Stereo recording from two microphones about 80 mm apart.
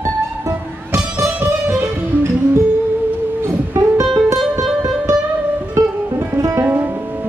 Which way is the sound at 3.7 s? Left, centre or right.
Right.